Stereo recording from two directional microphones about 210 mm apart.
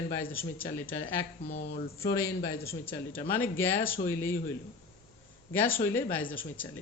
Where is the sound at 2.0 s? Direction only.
15° left (ahead or behind).